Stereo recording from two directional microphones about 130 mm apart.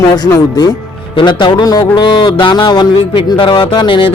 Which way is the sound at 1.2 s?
35° left (ahead or behind).